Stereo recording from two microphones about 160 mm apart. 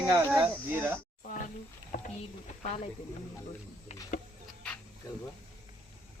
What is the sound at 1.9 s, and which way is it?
Speech, 55° left (ahead or behind).